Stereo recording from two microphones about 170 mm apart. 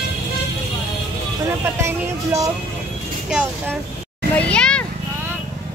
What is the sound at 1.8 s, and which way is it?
Speech, 15° right (ahead or behind).